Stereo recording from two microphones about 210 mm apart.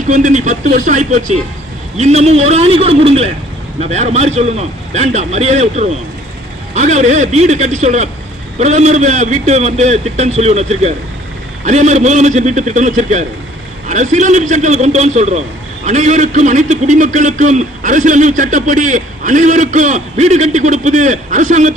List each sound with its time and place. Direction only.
0.1 s a man's voice: 35° right (ahead or behind)